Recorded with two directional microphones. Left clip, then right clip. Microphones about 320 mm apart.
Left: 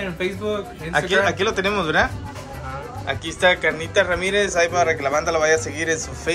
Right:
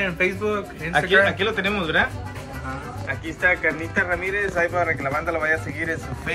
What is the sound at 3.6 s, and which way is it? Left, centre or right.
Speech, centre.